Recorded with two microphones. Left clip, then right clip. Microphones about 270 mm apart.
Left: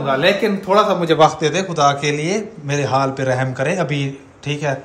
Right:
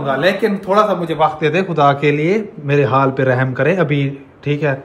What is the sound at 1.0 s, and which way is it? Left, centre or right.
Speech, left.